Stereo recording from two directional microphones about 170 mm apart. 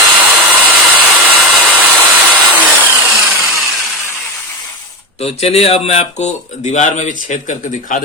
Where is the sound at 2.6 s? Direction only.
10° right (ahead or behind).